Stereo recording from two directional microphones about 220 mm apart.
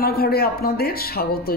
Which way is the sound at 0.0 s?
45° left (ahead or behind).